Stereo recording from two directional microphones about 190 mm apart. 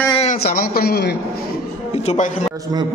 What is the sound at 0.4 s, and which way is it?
A man's voice, 50° left (ahead or behind).